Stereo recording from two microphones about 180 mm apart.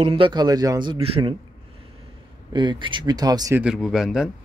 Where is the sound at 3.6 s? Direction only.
Centre (ahead or behind).